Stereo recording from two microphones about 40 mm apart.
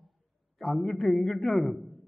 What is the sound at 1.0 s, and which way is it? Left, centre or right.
Speech, left.